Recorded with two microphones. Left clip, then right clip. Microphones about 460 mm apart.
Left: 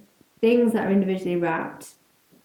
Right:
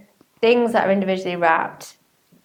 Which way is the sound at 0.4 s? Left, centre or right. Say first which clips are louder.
Right 4 dB; right.